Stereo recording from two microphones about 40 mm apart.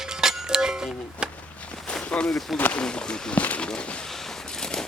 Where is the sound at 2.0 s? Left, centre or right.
Left.